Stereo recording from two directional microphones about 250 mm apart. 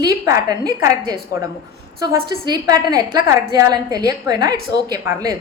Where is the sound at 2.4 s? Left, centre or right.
Centre.